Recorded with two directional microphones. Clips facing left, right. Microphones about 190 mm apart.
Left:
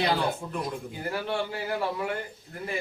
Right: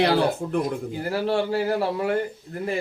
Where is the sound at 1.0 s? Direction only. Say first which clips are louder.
Right 6 dB; 35° right (ahead or behind).